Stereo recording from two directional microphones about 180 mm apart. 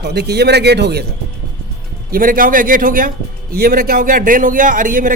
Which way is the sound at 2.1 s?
50° right (ahead or behind).